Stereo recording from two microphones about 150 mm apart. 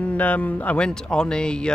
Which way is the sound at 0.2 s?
10° left (ahead or behind).